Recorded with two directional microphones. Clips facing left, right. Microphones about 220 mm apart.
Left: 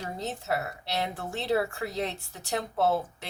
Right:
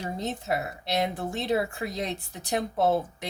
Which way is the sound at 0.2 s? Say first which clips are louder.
Right 1 dB; 20° right (ahead or behind).